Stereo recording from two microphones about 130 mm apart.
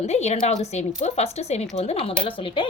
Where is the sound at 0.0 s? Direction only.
55° left (ahead or behind).